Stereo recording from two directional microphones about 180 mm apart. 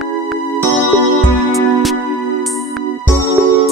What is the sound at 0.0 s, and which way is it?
Music, centre (ahead or behind).